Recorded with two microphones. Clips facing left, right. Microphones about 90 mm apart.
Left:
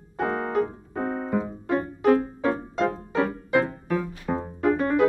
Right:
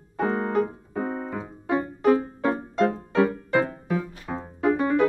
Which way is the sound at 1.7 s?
5° right (ahead or behind).